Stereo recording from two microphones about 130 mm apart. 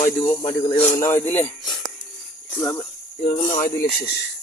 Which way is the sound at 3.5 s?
90° left.